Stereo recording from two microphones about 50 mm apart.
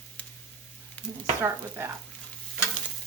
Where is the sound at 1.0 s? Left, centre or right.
Left.